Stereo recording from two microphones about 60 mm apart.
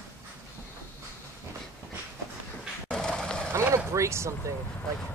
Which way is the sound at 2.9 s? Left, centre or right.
Centre.